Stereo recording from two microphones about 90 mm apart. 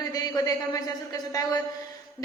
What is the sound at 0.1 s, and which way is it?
A woman's voice, 45° left (ahead or behind).